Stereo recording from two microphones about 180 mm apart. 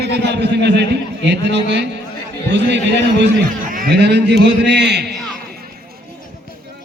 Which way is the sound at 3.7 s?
55° right (ahead or behind).